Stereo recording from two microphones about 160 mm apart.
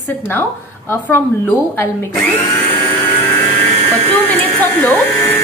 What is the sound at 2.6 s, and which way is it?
Vehicle, 15° left (ahead or behind).